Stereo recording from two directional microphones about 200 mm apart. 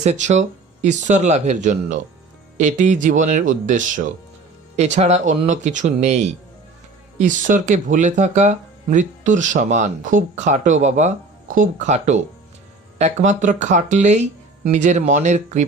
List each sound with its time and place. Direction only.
0.0 s speech: 35° right (ahead or behind)